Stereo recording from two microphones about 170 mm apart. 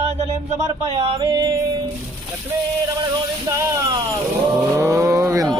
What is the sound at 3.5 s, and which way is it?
Music, 20° right (ahead or behind).